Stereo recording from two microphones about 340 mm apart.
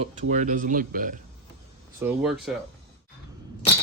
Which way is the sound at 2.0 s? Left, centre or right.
Centre.